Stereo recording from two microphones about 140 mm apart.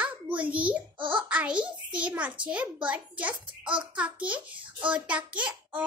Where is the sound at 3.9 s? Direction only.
10° right (ahead or behind).